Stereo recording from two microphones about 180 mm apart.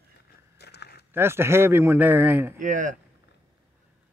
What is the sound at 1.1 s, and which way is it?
Speech, 15° right (ahead or behind).